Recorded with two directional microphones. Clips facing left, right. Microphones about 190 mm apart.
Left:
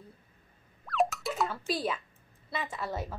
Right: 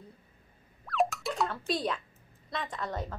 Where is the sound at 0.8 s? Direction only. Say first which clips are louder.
Even; centre (ahead or behind).